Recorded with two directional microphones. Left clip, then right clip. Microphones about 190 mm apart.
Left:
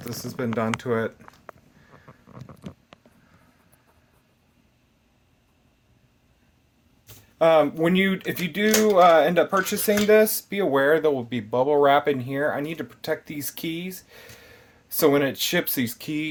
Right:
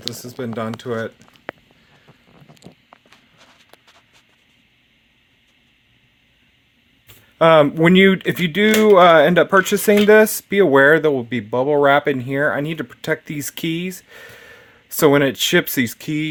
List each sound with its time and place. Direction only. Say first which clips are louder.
0.1 s speech: even; 15° right (ahead or behind)
7.3 s speech: right 6 dB; 75° right (ahead or behind); by 16.2 s 50° right (ahead or behind)